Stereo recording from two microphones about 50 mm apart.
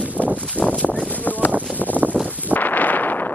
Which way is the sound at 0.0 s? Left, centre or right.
Right.